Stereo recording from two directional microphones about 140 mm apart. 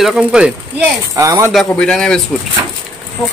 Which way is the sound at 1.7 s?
5° left (ahead or behind).